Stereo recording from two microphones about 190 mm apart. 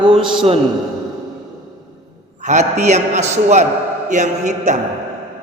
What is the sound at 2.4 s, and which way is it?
A man's voice, 40° right (ahead or behind).